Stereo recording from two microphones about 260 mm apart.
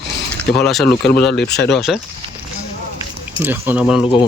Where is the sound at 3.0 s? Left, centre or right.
Centre.